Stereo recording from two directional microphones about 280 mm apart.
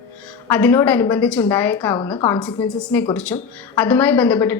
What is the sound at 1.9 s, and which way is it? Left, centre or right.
Speech, centre.